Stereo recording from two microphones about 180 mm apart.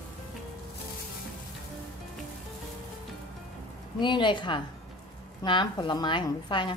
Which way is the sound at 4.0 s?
25° left (ahead or behind).